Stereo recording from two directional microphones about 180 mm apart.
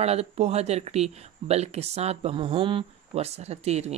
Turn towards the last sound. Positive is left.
turn(degrees=-35)  # may be behind; listen again after turning